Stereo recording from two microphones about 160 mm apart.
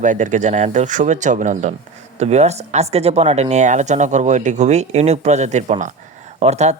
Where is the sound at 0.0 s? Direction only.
50° right (ahead or behind).